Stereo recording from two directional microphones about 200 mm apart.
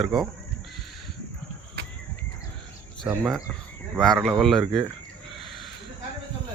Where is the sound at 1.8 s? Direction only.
60° right (ahead or behind).